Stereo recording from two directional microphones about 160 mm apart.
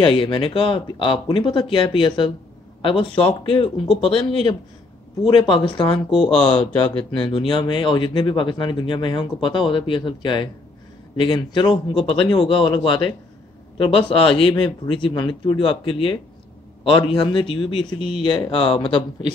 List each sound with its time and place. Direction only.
0.0 s speech: 35° left (ahead or behind)
6.1 s speech: 5° left (ahead or behind)
6.6 s speech: 35° left (ahead or behind)